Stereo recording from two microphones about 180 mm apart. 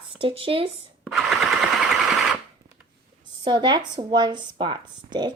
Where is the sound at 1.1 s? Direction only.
Centre (ahead or behind).